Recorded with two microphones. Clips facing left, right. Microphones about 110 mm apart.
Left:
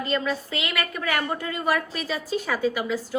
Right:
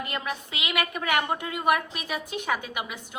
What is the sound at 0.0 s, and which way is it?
A woman's voice, 15° right (ahead or behind).